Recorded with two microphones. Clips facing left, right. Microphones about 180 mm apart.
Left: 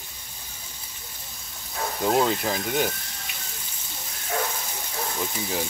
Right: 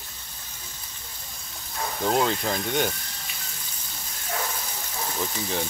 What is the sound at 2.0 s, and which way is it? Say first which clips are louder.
Speech: left 1 dB; 5° left (ahead or behind).